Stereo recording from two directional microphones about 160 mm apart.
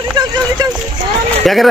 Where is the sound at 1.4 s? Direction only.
Centre (ahead or behind).